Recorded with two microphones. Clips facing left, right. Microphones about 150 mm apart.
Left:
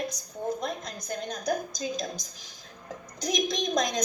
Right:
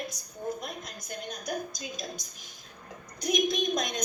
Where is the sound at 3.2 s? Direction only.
35° left (ahead or behind).